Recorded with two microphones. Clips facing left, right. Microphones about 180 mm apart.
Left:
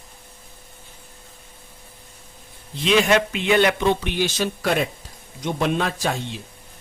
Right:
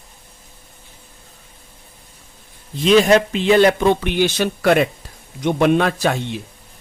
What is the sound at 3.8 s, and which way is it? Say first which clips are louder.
Speech: right 5 dB; 55° right (ahead or behind).